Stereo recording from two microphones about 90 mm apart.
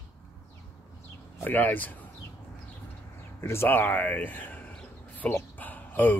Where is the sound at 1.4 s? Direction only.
20° left (ahead or behind).